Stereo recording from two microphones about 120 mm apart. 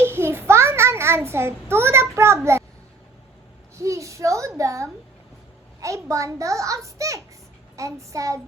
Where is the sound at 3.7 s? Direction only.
25° right (ahead or behind).